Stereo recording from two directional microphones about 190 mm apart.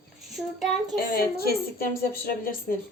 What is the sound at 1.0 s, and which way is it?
A woman's voice, 55° left (ahead or behind).